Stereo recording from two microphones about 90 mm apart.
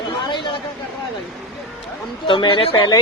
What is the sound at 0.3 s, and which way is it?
Chatter, 60° left (ahead or behind).